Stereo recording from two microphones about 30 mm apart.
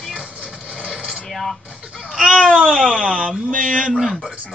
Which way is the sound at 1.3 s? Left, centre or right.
Centre.